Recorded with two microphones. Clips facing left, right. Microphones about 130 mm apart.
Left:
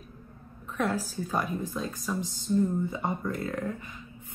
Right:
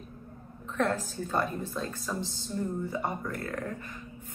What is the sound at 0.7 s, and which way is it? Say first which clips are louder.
A woman's voice: even; 10° left (ahead or behind).